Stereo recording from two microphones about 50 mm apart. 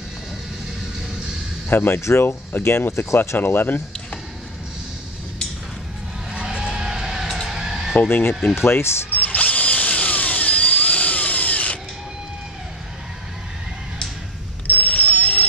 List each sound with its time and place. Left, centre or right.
1.7 s speech: left
2.0 s speech: left
2.6 s speech: left
3.3 s speech: left
6.3 s a sound: centre
8.1 s speech: left
9.1 s drill: left
14.7 s a sound: left